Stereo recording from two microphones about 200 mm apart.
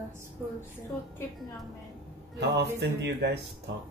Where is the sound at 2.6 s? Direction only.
55° right (ahead or behind).